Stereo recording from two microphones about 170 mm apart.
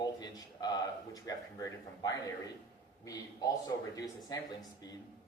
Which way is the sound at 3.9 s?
20° left (ahead or behind).